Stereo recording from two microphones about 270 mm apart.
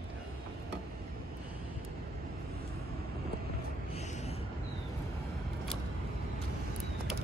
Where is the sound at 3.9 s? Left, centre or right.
Left.